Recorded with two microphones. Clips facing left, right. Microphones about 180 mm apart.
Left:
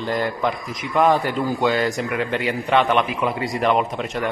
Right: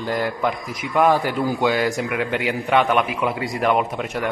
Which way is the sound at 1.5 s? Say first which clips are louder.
Even; 15° right (ahead or behind).